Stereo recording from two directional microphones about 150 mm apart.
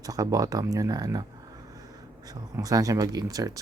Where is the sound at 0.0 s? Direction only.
25° right (ahead or behind).